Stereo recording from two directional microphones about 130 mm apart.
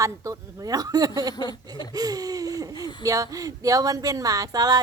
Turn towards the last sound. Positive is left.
turn(degrees=-30)  # may be behind; listen again after turning